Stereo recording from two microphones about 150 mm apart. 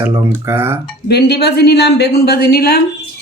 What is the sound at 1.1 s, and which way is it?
A woman's voice, 90° left.